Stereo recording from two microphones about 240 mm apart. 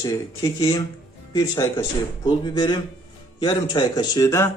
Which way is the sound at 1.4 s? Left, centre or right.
Centre.